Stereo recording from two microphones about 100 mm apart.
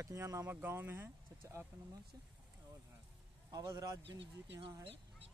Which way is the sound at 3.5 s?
40° right (ahead or behind).